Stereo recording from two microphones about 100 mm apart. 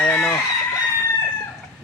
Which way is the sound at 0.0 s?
15° left (ahead or behind).